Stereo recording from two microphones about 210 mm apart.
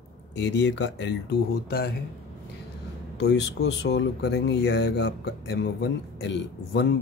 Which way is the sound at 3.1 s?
55° left (ahead or behind).